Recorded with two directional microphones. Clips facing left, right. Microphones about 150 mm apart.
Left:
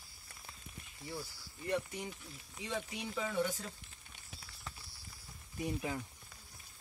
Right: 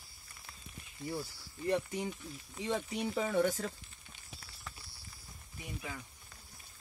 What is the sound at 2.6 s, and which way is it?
Speech, 45° right (ahead or behind).